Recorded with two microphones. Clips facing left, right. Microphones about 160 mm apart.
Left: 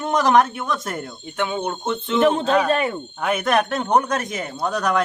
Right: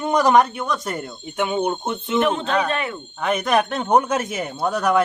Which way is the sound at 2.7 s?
35° left (ahead or behind).